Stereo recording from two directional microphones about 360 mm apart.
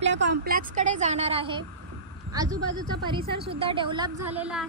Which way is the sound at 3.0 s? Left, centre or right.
Centre.